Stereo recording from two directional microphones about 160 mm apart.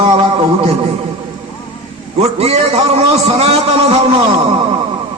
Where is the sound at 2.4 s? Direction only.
40° right (ahead or behind).